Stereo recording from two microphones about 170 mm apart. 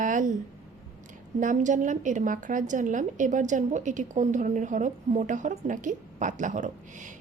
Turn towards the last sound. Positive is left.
turn(degrees=-45)  # may be behind; listen again after turning